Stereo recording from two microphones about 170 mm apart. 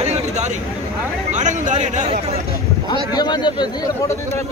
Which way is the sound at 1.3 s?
45° right (ahead or behind).